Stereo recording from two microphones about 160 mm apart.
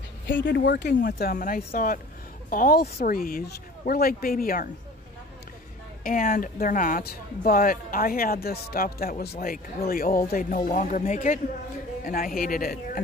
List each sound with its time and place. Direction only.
0.5 s speech: 90° left
1.7 s speech: 60° left (ahead or behind)
6.0 s speech: 60° left (ahead or behind)